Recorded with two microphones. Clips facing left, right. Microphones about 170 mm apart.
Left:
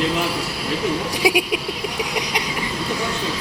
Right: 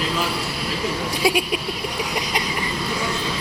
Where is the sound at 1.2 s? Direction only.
15° left (ahead or behind).